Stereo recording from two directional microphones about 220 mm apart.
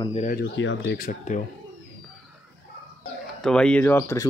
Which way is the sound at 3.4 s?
5° left (ahead or behind).